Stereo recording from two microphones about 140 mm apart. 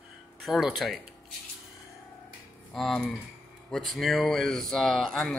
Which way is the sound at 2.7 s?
5° left (ahead or behind).